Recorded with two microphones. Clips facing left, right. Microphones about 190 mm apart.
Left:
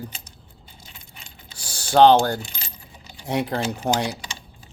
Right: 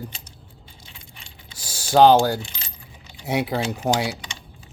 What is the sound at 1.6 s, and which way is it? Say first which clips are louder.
Speech: even; 10° right (ahead or behind).